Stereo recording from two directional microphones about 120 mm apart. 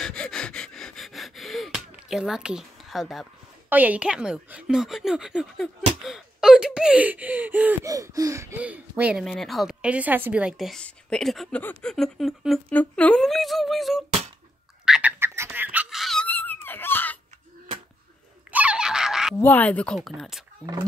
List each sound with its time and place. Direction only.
0.0 s a sound: 5° left (ahead or behind)
3.6 s a woman's voice: 15° right (ahead or behind)
7.8 s a sound: 30° right (ahead or behind)
8.5 s a woman's voice: 10° right (ahead or behind)
9.2 s a woman's voice: centre (ahead or behind)
10.7 s speech: 5° left (ahead or behind)
12.7 s speech: 10° left (ahead or behind)
14.9 s a sound: 10° right (ahead or behind)
16.0 s dog: centre (ahead or behind)
16.3 s a sound: 15° left (ahead or behind)
18.5 s giggle: 10° right (ahead or behind)
19.4 s speech: 15° left (ahead or behind)
20.0 s speech: centre (ahead or behind)